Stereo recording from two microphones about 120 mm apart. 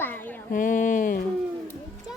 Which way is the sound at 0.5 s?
90° left.